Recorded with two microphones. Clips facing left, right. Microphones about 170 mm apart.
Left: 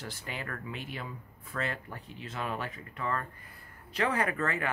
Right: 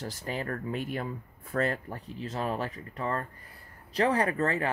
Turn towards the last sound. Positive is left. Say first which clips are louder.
# right 4 dB
turn(degrees=-35)  # may be behind; listen again after turning